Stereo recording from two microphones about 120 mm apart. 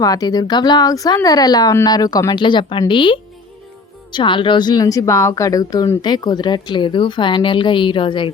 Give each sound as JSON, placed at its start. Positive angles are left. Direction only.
{"t": 0.0, "sound": "a woman's voice", "side_deg": 30}